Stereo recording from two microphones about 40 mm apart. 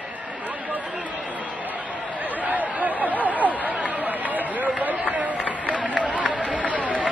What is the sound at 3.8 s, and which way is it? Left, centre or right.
Run, right.